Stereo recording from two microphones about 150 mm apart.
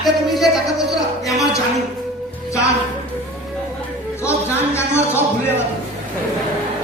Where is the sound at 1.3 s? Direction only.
Centre (ahead or behind).